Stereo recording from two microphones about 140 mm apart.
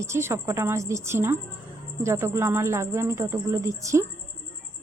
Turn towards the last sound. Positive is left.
turn(degrees=-20)  # may be behind; listen again after turning